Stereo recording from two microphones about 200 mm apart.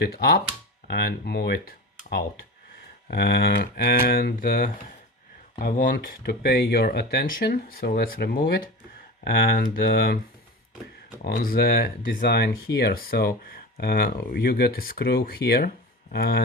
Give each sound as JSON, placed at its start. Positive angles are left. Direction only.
{"t": 0.0, "sound": "speech", "side_deg": 55}
{"t": 11.2, "sound": "speech", "side_deg": 45}